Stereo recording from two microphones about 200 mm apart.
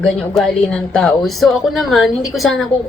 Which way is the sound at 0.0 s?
Centre (ahead or behind).